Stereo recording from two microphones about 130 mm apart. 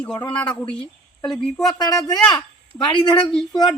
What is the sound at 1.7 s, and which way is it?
Speech, 30° left (ahead or behind).